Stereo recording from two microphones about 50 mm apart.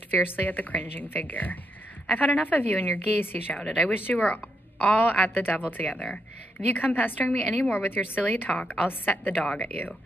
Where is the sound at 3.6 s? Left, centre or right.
Centre.